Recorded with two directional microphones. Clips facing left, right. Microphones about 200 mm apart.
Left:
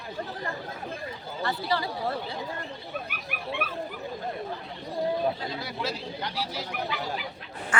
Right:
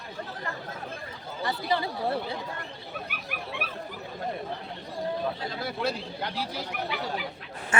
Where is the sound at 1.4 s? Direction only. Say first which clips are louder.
Right 1 dB; 20° right (ahead or behind).